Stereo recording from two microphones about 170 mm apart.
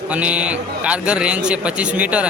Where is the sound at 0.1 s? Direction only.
5° right (ahead or behind).